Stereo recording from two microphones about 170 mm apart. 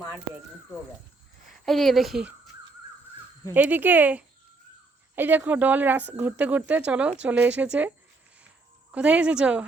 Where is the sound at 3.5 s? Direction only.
10° right (ahead or behind).